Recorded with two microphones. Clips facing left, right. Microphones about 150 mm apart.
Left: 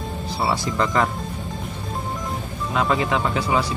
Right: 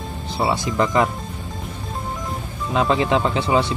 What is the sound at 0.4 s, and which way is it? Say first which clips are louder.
Speech: right 3 dB; 20° right (ahead or behind).